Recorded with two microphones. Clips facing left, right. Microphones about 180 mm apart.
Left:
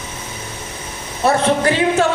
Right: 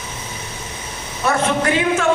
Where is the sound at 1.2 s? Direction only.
30° left (ahead or behind).